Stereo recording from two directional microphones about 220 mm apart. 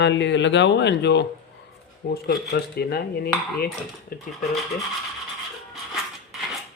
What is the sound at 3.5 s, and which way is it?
Cutlery, 40° left (ahead or behind).